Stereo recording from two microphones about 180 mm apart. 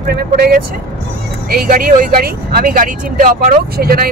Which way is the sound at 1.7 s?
55° right (ahead or behind).